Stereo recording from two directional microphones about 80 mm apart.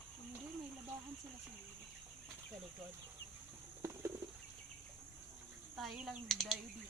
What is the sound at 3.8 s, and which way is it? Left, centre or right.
Bird, right.